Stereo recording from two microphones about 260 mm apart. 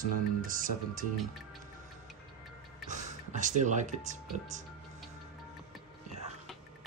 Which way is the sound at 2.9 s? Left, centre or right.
Right.